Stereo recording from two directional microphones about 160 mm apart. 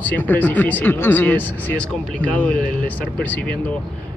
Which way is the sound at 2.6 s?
60° left (ahead or behind).